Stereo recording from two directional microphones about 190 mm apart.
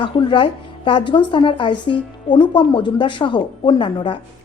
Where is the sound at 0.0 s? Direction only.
25° left (ahead or behind).